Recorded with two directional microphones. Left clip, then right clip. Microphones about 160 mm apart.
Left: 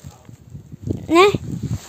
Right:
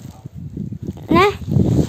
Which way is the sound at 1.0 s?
20° left (ahead or behind).